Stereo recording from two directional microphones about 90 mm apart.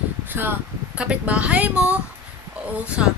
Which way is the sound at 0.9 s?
15° right (ahead or behind).